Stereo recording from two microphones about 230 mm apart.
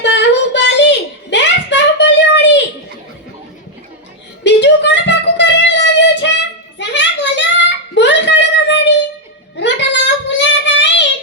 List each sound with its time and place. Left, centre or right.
0.0 s child singing: left
4.4 s child singing: left
6.7 s a sound: left
9.6 s child singing: left